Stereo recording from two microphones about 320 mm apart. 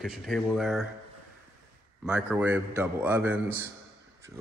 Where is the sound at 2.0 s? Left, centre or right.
Centre.